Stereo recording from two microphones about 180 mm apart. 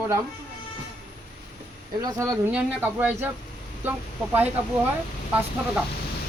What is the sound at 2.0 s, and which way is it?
Speech, 15° right (ahead or behind).